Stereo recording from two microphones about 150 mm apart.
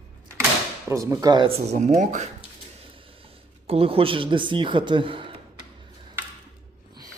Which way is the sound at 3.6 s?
40° right (ahead or behind).